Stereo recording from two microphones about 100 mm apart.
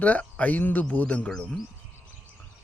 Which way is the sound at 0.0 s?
15° left (ahead or behind).